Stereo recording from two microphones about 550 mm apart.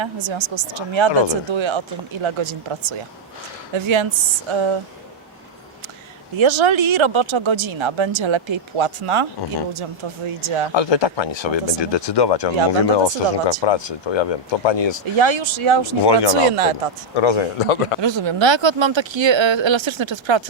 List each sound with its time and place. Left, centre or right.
0.0 s speech: right
6.3 s speech: right
10.8 s speech: left
15.2 s speech: right
16.0 s speech: left
16.5 s speech: right
17.2 s a man's voice: left
18.0 s speech: right